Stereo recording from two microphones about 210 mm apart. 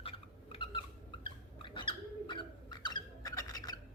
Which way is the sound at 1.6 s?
25° left (ahead or behind).